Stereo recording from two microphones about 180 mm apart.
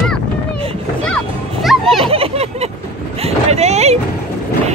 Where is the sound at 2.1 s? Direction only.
35° right (ahead or behind).